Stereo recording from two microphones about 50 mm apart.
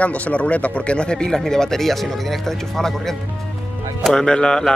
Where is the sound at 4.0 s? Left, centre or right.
Centre.